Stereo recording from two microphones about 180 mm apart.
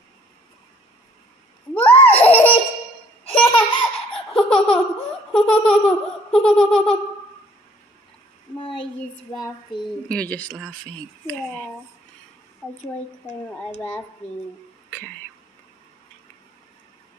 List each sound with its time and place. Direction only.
1.7 s a sound: 10° left (ahead or behind)
2.0 s laughter: 10° left (ahead or behind)
2.3 s baby laughter: 30° left (ahead or behind)
3.3 s laughter: 30° left (ahead or behind)
4.3 s laughter: 5° left (ahead or behind)
10.0 s speech: 5° left (ahead or behind)
13.7 s speech: 10° left (ahead or behind)